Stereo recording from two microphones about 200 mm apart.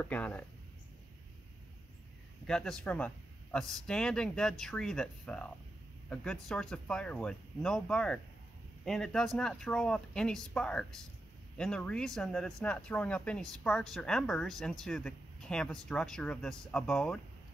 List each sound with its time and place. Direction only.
0.0 s speech: 10° left (ahead or behind)
2.4 s speech: 5° left (ahead or behind)